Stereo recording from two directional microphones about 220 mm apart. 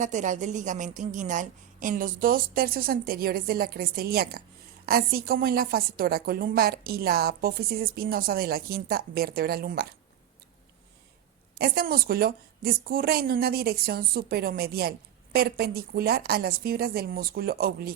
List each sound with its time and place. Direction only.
0.0 s a woman's voice: 35° right (ahead or behind)
11.5 s a woman's voice: 45° right (ahead or behind)